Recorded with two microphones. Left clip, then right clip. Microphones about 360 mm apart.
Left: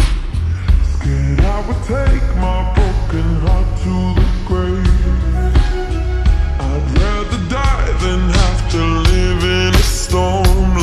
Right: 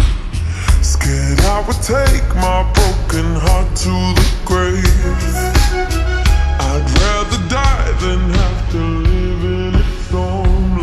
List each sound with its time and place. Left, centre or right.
1.0 s music: right
6.2 s music: centre
9.4 s music: left
10.1 s music: left